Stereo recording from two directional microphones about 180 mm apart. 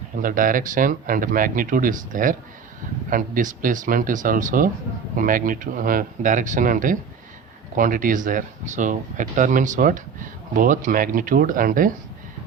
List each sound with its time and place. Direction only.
0.2 s speech: 50° right (ahead or behind)